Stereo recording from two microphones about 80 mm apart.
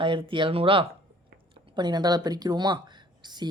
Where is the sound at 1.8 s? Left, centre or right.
Right.